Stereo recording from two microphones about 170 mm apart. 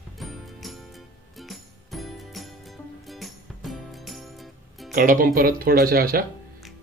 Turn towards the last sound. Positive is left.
turn(degrees=-60)  # may be behind; listen again after turning